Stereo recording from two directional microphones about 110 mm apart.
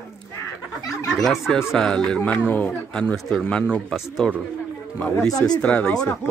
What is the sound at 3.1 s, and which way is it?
Speech, centre (ahead or behind).